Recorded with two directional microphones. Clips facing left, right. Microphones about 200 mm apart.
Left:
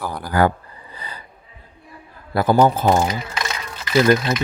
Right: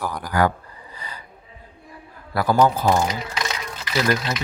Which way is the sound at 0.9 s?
30° left (ahead or behind).